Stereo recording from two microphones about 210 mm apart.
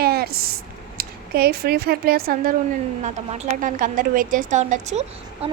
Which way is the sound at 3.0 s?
35° right (ahead or behind).